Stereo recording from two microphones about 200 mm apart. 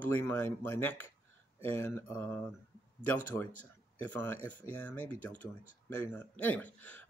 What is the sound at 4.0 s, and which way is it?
Speech, 10° left (ahead or behind).